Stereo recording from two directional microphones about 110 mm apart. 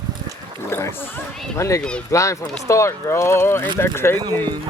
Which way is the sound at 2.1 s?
30° left (ahead or behind).